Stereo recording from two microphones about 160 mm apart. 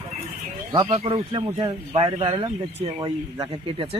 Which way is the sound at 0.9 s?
35° right (ahead or behind).